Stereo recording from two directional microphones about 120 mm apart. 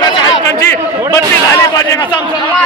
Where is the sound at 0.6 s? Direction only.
25° left (ahead or behind).